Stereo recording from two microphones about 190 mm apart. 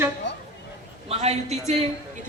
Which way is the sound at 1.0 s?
35° right (ahead or behind).